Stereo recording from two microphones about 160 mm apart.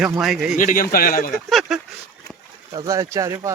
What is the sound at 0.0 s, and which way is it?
Speech, centre (ahead or behind).